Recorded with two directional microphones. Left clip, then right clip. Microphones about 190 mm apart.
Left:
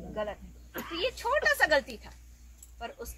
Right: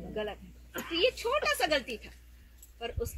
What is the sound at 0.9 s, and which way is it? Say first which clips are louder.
A woman's voice: right 1 dB; 20° left (ahead or behind).